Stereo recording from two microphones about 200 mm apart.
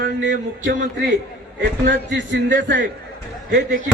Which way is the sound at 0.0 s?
65° right (ahead or behind).